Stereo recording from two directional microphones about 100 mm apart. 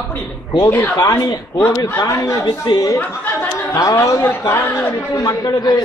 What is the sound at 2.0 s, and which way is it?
Speech, 30° left (ahead or behind).